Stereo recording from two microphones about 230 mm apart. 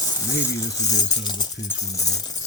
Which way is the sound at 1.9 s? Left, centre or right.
Centre.